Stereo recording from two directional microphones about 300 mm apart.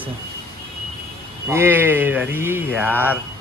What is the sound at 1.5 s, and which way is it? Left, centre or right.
Speech, centre.